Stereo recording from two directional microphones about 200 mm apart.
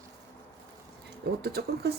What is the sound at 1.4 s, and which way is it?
Speech, 55° right (ahead or behind).